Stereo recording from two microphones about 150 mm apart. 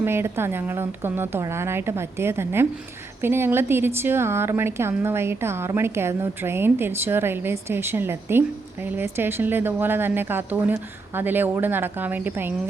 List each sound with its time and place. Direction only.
0.0 s a woman's voice: 15° right (ahead or behind)